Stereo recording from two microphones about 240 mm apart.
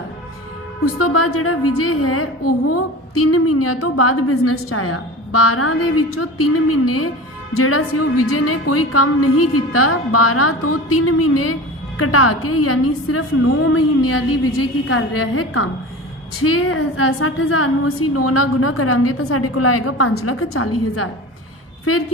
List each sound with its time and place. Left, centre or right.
0.9 s a woman's voice: left